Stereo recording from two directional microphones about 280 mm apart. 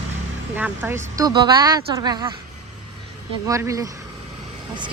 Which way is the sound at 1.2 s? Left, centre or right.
Centre.